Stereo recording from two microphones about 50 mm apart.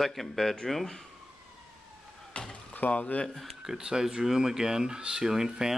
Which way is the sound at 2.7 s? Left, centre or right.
Left.